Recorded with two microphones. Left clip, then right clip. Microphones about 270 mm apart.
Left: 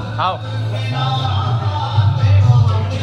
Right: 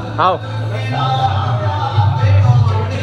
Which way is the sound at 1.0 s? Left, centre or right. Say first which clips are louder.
Right 6 dB; centre.